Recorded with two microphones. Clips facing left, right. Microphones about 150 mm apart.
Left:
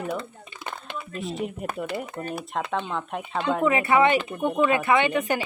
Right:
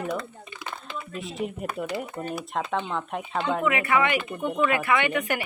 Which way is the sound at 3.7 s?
30° left (ahead or behind).